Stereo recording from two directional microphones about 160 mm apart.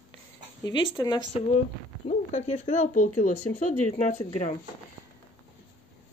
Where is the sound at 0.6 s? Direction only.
25° left (ahead or behind).